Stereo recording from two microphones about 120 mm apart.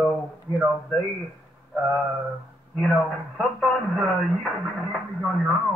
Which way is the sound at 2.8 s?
Centre (ahead or behind).